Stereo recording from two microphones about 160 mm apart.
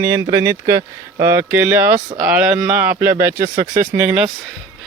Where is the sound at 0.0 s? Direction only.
20° right (ahead or behind).